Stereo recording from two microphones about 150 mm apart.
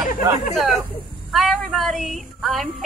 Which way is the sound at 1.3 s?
Centre (ahead or behind).